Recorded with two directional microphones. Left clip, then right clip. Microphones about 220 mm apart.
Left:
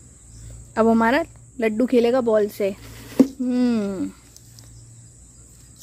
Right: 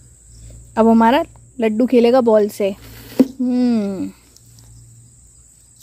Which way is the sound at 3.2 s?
5° right (ahead or behind).